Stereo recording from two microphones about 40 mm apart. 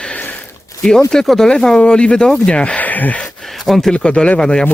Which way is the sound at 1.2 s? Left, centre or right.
Centre.